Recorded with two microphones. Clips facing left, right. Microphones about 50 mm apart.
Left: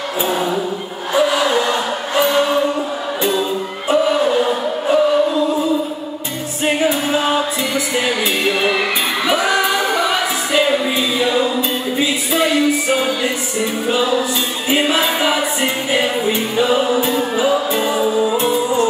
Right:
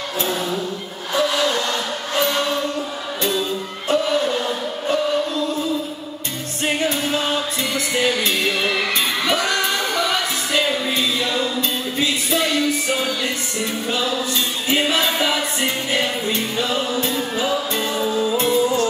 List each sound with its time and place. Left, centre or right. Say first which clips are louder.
0.2 s music: left 5 dB; centre